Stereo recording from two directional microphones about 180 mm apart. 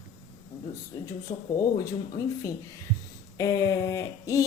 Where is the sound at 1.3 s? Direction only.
25° left (ahead or behind).